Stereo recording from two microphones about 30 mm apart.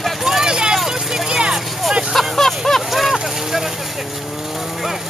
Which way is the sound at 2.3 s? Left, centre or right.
Centre.